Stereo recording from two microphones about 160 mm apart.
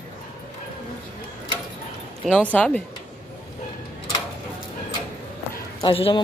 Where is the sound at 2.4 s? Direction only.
10° left (ahead or behind).